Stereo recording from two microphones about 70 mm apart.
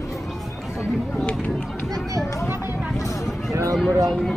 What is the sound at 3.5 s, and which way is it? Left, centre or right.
Speech, right.